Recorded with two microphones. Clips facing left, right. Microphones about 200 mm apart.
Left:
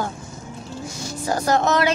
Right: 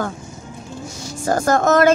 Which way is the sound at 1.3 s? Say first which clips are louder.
Right 4 dB; 50° right (ahead or behind).